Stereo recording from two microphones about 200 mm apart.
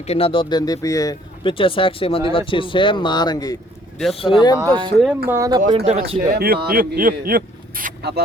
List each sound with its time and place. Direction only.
0.1 s speech: 25° left (ahead or behind)
4.6 s speech: 20° right (ahead or behind)
5.6 s speech: 30° right (ahead or behind)
6.3 s speech: 50° right (ahead or behind)